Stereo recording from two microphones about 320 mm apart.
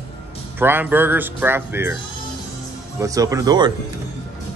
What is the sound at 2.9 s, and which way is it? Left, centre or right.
Speech, centre.